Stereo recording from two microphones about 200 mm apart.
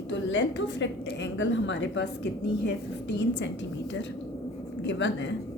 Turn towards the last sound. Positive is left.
turn(degrees=60)  # may be behind; listen again after turning